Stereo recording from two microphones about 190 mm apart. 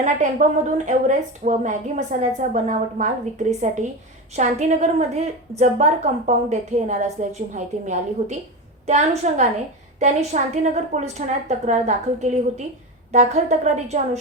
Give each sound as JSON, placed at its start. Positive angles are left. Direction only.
{"t": 0.0, "sound": "a woman's voice", "side_deg": -40}